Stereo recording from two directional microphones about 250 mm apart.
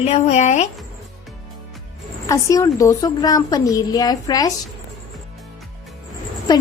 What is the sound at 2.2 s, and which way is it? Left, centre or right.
A woman's voice, centre.